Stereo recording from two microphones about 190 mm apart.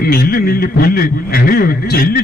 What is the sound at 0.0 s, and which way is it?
A man's voice, 50° left (ahead or behind).